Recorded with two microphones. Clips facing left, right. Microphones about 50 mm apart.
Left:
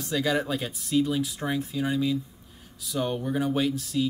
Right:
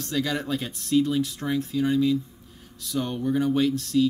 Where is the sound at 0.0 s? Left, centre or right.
Centre.